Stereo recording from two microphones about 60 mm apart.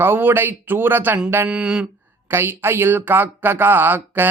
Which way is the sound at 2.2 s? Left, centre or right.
Right.